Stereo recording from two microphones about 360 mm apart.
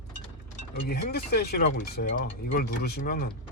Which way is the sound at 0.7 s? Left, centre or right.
Left.